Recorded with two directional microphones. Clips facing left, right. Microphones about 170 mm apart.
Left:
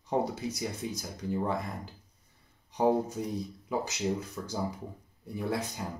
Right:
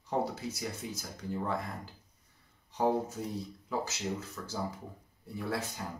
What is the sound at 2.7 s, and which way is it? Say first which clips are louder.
Speech: left 3 dB; 15° left (ahead or behind).